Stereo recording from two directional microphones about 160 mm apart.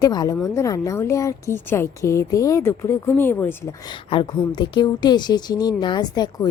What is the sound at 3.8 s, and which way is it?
A woman's voice, 30° left (ahead or behind).